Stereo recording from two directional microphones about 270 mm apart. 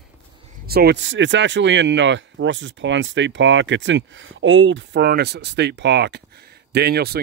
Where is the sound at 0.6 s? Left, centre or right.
Right.